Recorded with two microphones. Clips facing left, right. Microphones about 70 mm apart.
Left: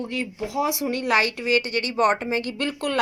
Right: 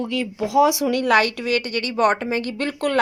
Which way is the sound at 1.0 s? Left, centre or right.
Right.